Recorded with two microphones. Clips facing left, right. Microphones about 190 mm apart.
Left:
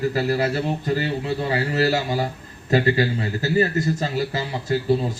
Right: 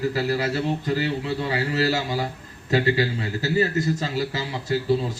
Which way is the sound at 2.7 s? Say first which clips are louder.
Left 2 dB; 50° left (ahead or behind).